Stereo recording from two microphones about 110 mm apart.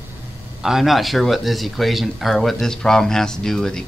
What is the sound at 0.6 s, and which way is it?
Speech, 5° right (ahead or behind).